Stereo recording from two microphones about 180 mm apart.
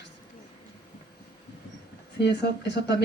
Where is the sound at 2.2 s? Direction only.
70° left (ahead or behind).